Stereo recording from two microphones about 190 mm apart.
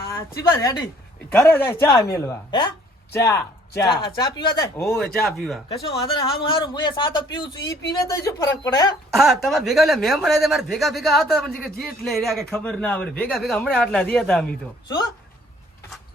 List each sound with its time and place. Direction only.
0.0 s a woman's voice: 15° left (ahead or behind)
4.9 s speech: centre (ahead or behind)
6.1 s a man's voice: 25° left (ahead or behind)
9.0 s speech: centre (ahead or behind)